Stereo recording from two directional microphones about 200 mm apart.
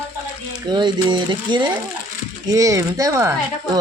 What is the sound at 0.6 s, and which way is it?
Speech, 20° right (ahead or behind).